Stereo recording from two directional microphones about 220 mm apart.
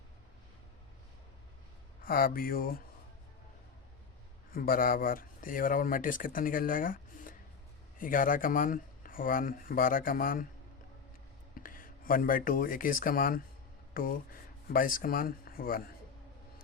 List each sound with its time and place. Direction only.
2.0 s speech: 40° left (ahead or behind)
4.5 s speech: 40° left (ahead or behind)
11.6 s speech: 40° left (ahead or behind)